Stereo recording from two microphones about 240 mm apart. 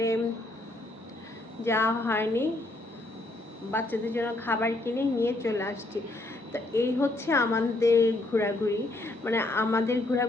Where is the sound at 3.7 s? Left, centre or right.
Centre.